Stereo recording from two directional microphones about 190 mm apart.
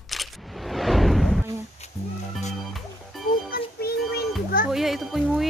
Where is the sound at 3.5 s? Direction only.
55° left (ahead or behind).